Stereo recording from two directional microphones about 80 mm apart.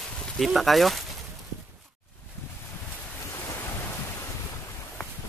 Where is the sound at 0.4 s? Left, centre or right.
Centre.